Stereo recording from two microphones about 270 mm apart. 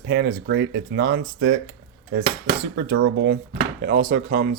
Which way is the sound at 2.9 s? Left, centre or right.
Right.